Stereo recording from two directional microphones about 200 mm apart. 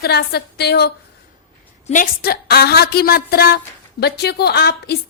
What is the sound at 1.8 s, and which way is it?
A woman's voice, 40° left (ahead or behind).